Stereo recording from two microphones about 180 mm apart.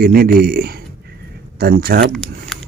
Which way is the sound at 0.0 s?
60° right (ahead or behind).